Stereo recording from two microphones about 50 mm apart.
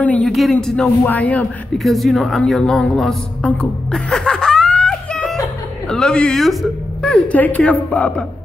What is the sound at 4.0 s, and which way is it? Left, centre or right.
Laughter, centre.